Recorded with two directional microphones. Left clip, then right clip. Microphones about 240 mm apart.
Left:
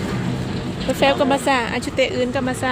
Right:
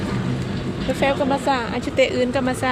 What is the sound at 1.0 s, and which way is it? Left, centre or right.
Speech, centre.